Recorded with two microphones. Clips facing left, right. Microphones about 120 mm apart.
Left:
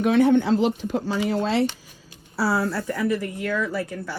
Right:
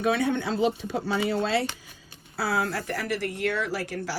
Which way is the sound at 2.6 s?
85° right.